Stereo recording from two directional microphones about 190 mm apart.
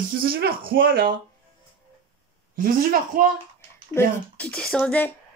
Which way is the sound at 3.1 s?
50° right (ahead or behind).